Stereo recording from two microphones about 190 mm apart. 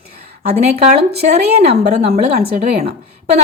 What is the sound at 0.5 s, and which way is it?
Speech, 35° right (ahead or behind).